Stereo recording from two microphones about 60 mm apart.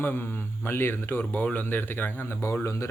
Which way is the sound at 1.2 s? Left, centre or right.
Left.